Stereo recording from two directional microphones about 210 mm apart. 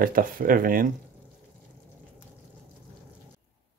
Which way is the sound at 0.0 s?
45° right (ahead or behind).